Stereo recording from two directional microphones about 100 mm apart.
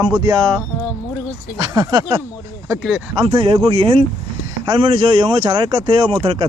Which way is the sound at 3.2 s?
65° right (ahead or behind).